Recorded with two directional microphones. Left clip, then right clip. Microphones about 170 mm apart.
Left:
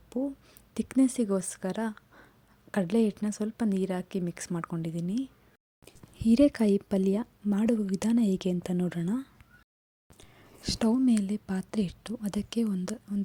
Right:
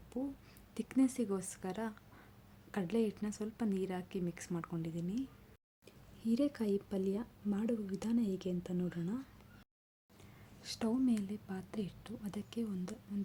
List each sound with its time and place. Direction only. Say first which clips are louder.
0.1 s speech: left 9 dB; 30° left (ahead or behind)